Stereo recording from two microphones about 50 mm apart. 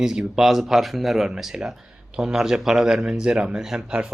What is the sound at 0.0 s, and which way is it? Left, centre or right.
Speech, centre.